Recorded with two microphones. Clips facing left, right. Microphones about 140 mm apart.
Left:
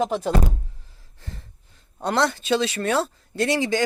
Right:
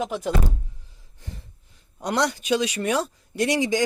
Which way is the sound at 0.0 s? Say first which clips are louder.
Left 3 dB; 35° left (ahead or behind).